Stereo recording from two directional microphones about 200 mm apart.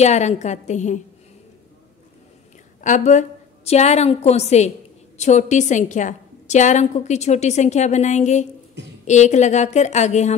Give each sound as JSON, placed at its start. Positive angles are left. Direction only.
{"t": 0.0, "sound": "a woman's voice", "side_deg": 35}
{"t": 2.8, "sound": "a woman's voice", "side_deg": 35}